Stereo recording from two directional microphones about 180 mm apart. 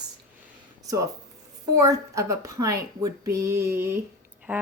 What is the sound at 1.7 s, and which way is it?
Speech, 20° right (ahead or behind).